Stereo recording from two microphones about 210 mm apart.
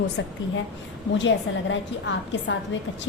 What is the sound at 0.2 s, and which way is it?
Speech, 60° left (ahead or behind).